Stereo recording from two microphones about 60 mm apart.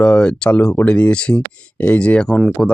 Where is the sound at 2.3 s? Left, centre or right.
Centre.